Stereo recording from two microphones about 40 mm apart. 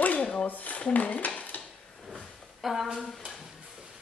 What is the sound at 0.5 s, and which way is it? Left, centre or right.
Speech, left.